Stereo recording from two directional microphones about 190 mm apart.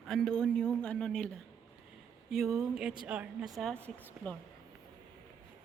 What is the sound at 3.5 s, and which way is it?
Speech, 5° left (ahead or behind).